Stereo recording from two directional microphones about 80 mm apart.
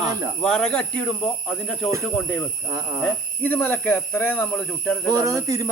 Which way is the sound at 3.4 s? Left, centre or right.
Left.